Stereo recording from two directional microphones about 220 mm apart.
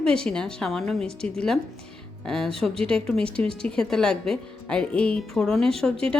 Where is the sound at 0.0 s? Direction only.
5° left (ahead or behind).